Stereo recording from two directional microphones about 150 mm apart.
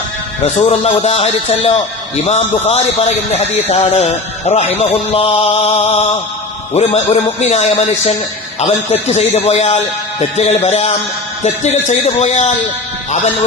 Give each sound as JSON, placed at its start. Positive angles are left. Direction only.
{"t": 0.4, "sound": "speech", "side_deg": 45}